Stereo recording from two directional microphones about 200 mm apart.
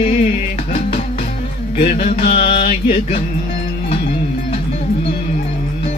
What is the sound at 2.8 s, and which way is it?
Music, 35° left (ahead or behind).